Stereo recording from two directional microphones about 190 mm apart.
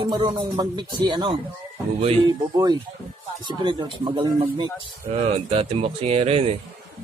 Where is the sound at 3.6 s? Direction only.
25° right (ahead or behind).